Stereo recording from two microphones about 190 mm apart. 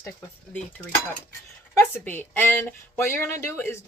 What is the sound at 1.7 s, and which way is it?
A woman's voice, 10° left (ahead or behind).